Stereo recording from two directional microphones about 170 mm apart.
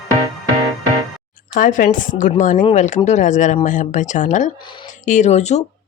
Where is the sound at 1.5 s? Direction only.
50° left (ahead or behind).